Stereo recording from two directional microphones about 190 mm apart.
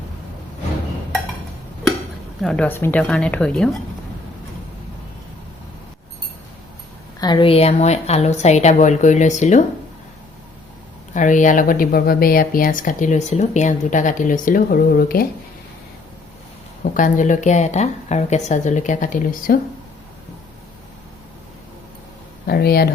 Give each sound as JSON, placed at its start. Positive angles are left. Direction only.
{"t": 2.4, "sound": "a woman's voice", "side_deg": 5}
{"t": 7.2, "sound": "a woman's voice", "side_deg": 25}
{"t": 11.1, "sound": "speech", "side_deg": 40}
{"t": 16.9, "sound": "a woman's voice", "side_deg": 45}
{"t": 22.4, "sound": "speech", "side_deg": 55}